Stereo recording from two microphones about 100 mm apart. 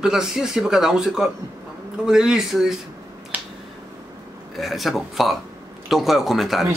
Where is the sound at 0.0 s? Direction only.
5° right (ahead or behind).